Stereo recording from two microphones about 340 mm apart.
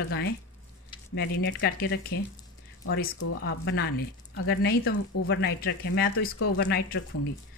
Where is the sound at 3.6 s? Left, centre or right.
Left.